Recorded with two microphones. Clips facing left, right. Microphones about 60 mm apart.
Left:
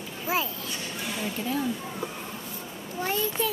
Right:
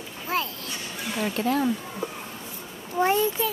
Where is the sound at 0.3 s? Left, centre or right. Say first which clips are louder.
Right 1 dB; centre.